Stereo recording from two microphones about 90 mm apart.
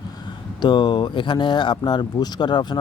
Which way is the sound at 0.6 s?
55° left (ahead or behind).